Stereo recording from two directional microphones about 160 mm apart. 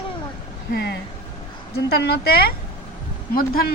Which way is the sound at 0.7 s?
85° left.